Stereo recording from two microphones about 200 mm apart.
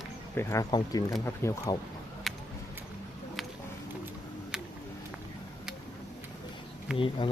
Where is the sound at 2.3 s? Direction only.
Centre (ahead or behind).